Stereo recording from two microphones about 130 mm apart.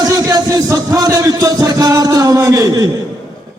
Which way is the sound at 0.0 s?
30° right (ahead or behind).